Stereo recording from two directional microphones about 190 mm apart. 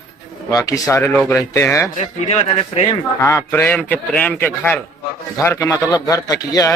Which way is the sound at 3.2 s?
15° left (ahead or behind).